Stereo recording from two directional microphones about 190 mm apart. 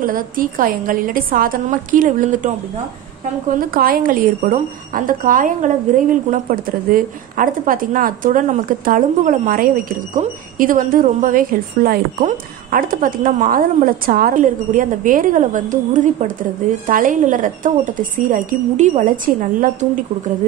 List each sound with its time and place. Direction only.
0.0 s speech: 45° right (ahead or behind)
3.5 s speech: 50° right (ahead or behind)